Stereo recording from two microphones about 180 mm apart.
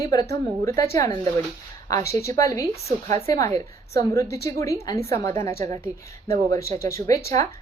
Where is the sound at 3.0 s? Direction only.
40° right (ahead or behind).